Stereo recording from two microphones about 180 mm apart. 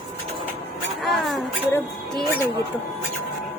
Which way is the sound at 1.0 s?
Centre (ahead or behind).